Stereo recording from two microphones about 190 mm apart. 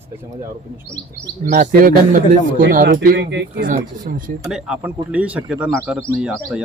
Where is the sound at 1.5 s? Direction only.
45° right (ahead or behind).